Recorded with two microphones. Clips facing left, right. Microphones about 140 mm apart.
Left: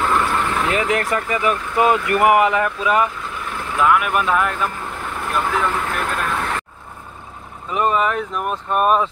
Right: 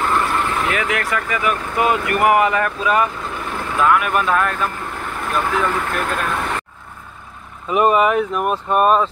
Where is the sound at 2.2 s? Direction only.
20° left (ahead or behind).